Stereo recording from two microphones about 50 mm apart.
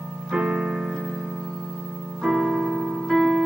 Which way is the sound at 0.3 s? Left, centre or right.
Centre.